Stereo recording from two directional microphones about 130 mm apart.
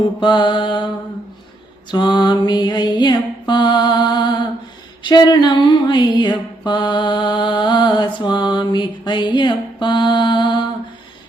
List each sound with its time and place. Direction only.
0.2 s mantra: 35° left (ahead or behind)
1.9 s mantra: 35° left (ahead or behind)